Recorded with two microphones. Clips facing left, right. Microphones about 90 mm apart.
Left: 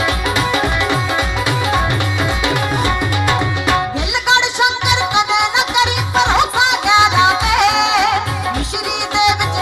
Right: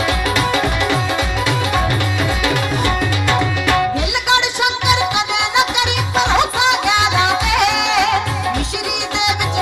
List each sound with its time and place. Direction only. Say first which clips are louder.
0.3 s music: left 1 dB; 20° left (ahead or behind)
2.4 s music: left 1 dB; 20° left (ahead or behind)
6.8 s music: left 4 dB; 25° left (ahead or behind)